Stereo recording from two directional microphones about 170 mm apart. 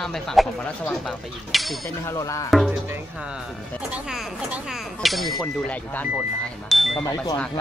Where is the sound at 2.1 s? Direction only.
20° left (ahead or behind).